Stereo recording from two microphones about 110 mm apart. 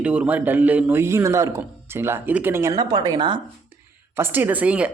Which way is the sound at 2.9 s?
40° right (ahead or behind).